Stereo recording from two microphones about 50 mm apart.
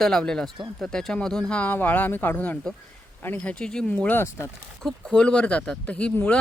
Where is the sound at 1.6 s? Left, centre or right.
Left.